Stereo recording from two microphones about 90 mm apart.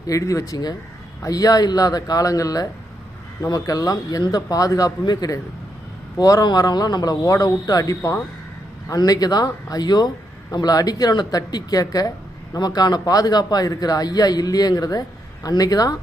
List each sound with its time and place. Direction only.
0.1 s speech: 35° left (ahead or behind)